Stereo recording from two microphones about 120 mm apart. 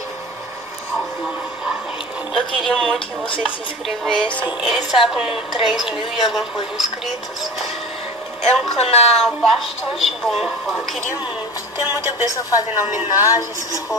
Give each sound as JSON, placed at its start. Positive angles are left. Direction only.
{"t": 2.3, "sound": "a woman's voice", "side_deg": 0}
{"t": 3.3, "sound": "speech", "side_deg": 45}
{"t": 3.8, "sound": "a woman's voice", "side_deg": 0}
{"t": 8.7, "sound": "speech", "side_deg": 60}
{"t": 9.2, "sound": "a woman's voice", "side_deg": 0}
{"t": 11.8, "sound": "speech", "side_deg": -20}
{"t": 12.3, "sound": "speech", "side_deg": 30}
{"t": 12.7, "sound": "a woman's voice", "side_deg": -20}
{"t": 13.4, "sound": "speech", "side_deg": 30}